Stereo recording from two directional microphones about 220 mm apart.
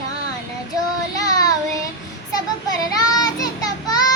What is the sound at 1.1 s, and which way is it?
Child singing, 15° left (ahead or behind).